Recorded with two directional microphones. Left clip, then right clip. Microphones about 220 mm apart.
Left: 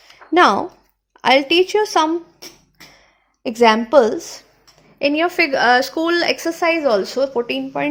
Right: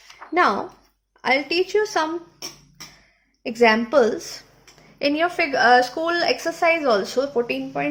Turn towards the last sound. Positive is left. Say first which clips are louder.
# left 3 dB
turn(degrees=30)  # may be behind; listen again after turning